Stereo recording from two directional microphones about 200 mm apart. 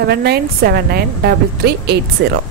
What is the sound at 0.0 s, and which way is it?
A woman's voice, 50° right (ahead or behind).